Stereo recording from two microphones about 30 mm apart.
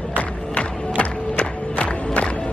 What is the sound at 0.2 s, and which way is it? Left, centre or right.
Crowd, left.